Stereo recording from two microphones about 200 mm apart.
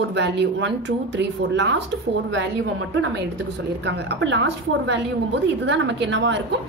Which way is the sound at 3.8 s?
60° right (ahead or behind).